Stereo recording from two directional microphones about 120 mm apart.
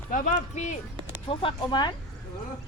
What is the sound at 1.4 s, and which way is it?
Speech, 40° left (ahead or behind).